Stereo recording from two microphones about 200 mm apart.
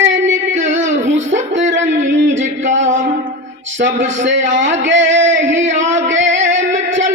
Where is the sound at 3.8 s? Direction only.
70° right (ahead or behind).